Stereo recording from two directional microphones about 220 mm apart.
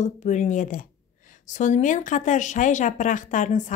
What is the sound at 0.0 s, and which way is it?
A woman's voice, 35° left (ahead or behind).